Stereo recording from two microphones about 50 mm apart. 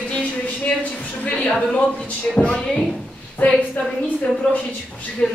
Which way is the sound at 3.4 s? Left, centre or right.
Left.